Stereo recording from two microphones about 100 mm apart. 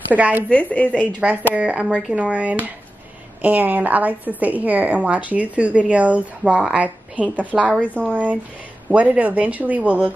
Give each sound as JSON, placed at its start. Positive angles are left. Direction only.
{"t": 0.1, "sound": "a woman's voice", "side_deg": -15}
{"t": 0.5, "sound": "a woman's voice", "side_deg": 15}
{"t": 1.5, "sound": "a woman's voice", "side_deg": -10}